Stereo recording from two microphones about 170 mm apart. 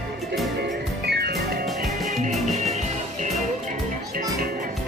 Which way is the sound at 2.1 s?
45° right (ahead or behind).